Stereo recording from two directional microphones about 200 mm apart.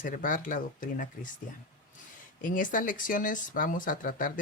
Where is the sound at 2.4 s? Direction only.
40° left (ahead or behind).